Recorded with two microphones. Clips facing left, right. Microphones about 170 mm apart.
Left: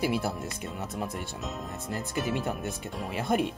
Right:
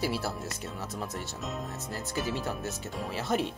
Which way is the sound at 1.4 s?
Centre (ahead or behind).